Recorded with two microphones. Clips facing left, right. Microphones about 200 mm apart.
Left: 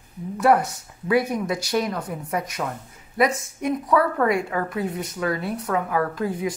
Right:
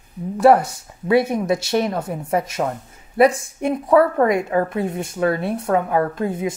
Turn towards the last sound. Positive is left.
turn(degrees=-25)  # may be behind; listen again after turning